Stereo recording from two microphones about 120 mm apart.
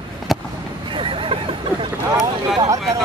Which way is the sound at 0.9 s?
45° right (ahead or behind).